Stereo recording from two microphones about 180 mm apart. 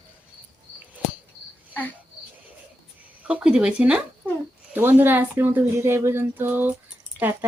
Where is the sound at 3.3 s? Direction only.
5° right (ahead or behind).